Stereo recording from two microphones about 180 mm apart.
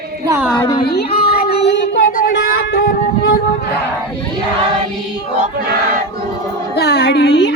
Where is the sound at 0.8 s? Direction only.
60° left (ahead or behind).